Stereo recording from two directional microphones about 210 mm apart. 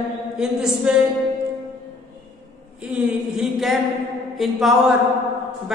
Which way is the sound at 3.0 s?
5° right (ahead or behind).